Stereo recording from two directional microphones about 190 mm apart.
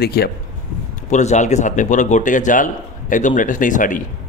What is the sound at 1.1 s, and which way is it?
Speech, 40° left (ahead or behind).